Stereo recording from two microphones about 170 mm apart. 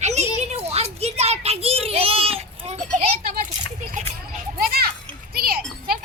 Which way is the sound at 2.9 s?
35° right (ahead or behind).